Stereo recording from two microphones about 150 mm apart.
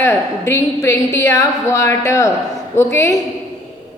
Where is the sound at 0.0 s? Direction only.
20° left (ahead or behind).